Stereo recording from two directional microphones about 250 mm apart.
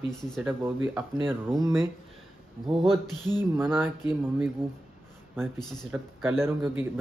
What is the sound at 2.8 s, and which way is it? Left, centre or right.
Music, centre.